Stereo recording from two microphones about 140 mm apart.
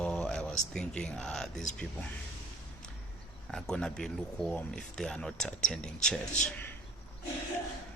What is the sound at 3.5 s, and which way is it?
Speech, 5° left (ahead or behind).